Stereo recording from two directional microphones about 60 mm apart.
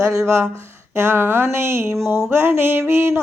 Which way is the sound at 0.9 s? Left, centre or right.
Right.